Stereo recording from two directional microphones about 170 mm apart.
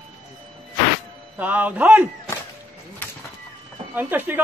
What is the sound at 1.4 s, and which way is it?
Speech, 10° right (ahead or behind).